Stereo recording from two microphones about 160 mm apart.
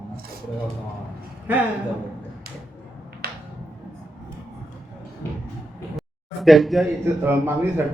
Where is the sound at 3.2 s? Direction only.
70° right (ahead or behind).